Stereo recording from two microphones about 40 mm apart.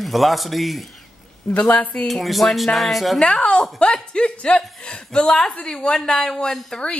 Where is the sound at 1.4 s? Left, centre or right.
Centre.